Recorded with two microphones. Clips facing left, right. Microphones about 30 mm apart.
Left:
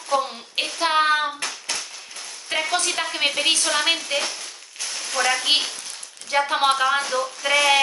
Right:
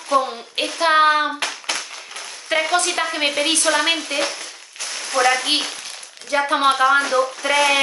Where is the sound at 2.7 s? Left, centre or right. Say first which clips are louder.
Right 4 dB; centre.